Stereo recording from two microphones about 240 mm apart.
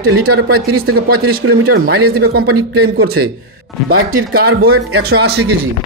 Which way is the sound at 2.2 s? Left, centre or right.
Right.